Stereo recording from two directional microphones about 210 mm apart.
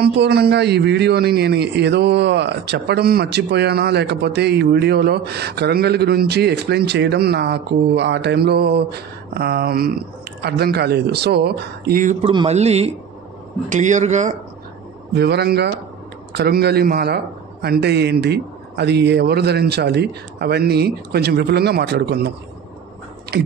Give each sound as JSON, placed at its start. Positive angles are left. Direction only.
{"t": 0.0, "sound": "a man's voice", "side_deg": -50}
{"t": 12.3, "sound": "speech", "side_deg": -25}
{"t": 15.1, "sound": "a man's voice", "side_deg": -55}
{"t": 23.3, "sound": "a man's voice", "side_deg": -45}